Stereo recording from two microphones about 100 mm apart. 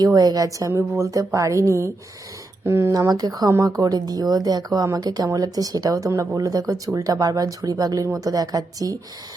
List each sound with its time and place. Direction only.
0.0 s speech: 40° right (ahead or behind)